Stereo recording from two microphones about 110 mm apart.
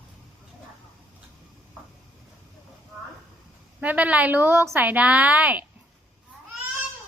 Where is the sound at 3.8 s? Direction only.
15° right (ahead or behind).